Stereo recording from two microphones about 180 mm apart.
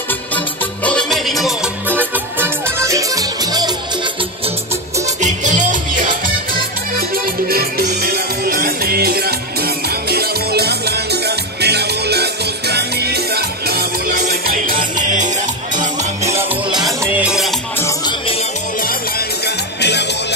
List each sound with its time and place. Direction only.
0.8 s music: 5° left (ahead or behind); by 3.7 s 20° right (ahead or behind)
5.2 s music: 45° right (ahead or behind)
17.0 s music: 10° right (ahead or behind)
17.7 s music: 15° left (ahead or behind)
18.8 s music: 55° left (ahead or behind)